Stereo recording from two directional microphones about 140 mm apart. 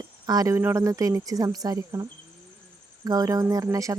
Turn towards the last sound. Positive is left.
turn(degrees=-25)  # may be behind; listen again after turning